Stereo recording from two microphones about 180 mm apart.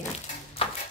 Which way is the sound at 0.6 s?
30° left (ahead or behind).